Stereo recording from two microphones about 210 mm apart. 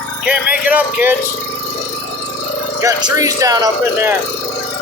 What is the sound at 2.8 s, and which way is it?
Speech, 15° right (ahead or behind).